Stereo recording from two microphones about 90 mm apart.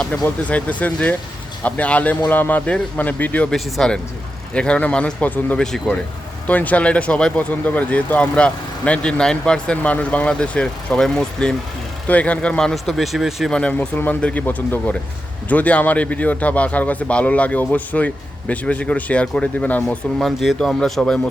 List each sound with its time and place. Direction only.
0.0 s speech: 10° left (ahead or behind)
3.5 s speech: 5° left (ahead or behind)
13.5 s speech: 15° left (ahead or behind)
20.1 s speech: centre (ahead or behind)